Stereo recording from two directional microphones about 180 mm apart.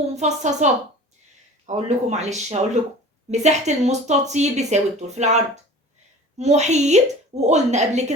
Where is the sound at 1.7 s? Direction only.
40° right (ahead or behind).